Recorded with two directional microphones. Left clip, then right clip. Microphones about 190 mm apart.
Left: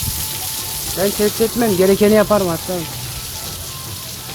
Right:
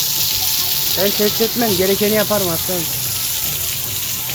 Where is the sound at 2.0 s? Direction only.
35° left (ahead or behind).